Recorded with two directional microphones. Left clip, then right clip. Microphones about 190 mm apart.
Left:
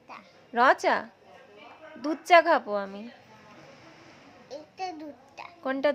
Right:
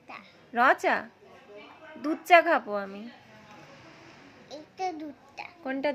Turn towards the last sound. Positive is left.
turn(degrees=20)  # may be behind; listen again after turning